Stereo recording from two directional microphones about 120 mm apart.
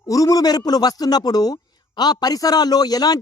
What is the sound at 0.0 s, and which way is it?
A man's voice, 30° left (ahead or behind).